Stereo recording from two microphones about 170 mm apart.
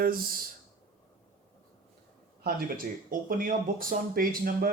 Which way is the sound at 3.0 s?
50° right (ahead or behind).